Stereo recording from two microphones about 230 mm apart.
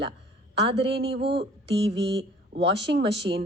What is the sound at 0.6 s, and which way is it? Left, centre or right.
Speech, right.